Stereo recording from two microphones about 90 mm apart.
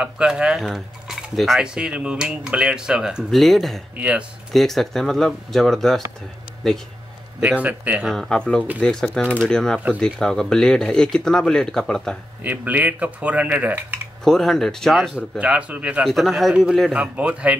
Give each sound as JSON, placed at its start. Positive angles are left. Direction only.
{"t": 0.0, "sound": "speech", "side_deg": -10}
{"t": 1.6, "sound": "speech", "side_deg": -10}
{"t": 7.4, "sound": "speech", "side_deg": -15}
{"t": 8.1, "sound": "speech", "side_deg": 5}
{"t": 12.4, "sound": "speech", "side_deg": -20}
{"t": 14.2, "sound": "speech", "side_deg": 5}
{"t": 15.1, "sound": "speech", "side_deg": -10}
{"t": 16.0, "sound": "speech", "side_deg": 0}
{"t": 16.9, "sound": "speech", "side_deg": -15}